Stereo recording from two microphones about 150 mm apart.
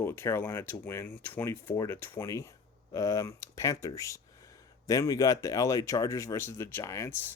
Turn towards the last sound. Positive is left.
turn(degrees=20)  # may be behind; listen again after turning